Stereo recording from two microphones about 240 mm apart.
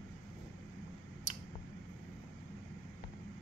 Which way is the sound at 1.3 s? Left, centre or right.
Right.